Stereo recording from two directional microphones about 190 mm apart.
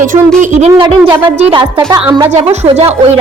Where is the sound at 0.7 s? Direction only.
25° right (ahead or behind).